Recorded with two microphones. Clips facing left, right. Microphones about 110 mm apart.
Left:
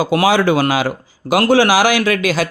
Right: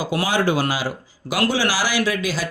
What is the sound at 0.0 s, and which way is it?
Speech, 80° left.